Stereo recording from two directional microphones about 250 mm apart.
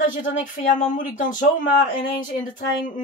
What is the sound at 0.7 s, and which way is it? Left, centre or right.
Speech, left.